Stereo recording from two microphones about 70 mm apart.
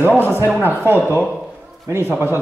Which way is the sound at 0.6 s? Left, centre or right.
Right.